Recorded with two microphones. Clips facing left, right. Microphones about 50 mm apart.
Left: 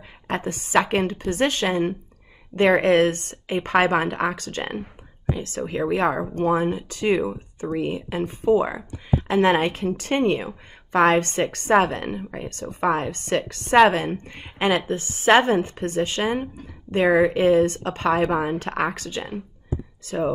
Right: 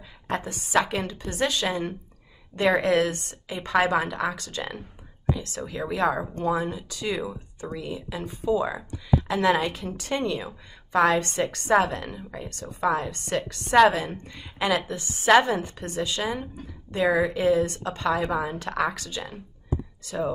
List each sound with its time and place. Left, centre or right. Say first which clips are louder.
0.3 s a woman's voice: left 3 dB; left
7.2 s speech: left 6 dB; left
7.7 s a woman's voice: left 8 dB; left